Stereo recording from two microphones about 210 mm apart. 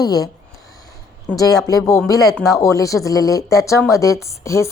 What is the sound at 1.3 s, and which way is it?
A woman's voice, 15° left (ahead or behind).